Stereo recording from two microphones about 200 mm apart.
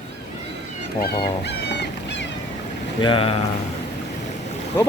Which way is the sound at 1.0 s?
55° left (ahead or behind).